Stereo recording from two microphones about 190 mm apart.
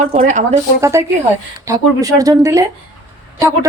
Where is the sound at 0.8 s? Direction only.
15° right (ahead or behind).